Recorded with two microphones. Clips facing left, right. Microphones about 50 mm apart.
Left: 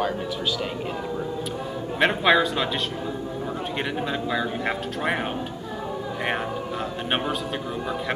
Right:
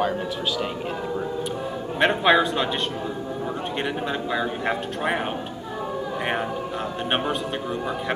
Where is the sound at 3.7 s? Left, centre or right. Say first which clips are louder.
Even; centre.